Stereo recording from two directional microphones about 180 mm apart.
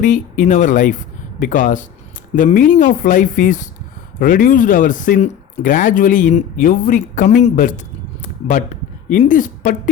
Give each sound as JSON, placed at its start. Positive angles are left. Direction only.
{"t": 0.0, "sound": "speech", "side_deg": 45}
{"t": 9.0, "sound": "speech", "side_deg": 45}